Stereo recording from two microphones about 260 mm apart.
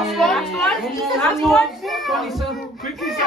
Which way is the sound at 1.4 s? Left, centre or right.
Centre.